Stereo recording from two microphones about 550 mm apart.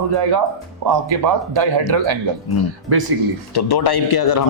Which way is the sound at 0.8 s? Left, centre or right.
Right.